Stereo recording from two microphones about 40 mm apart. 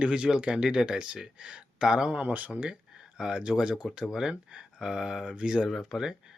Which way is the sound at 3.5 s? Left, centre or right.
Centre.